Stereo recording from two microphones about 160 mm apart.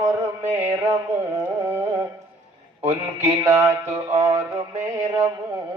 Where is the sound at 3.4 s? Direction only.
20° right (ahead or behind).